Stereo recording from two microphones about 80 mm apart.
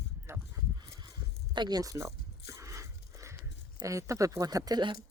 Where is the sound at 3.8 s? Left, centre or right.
Right.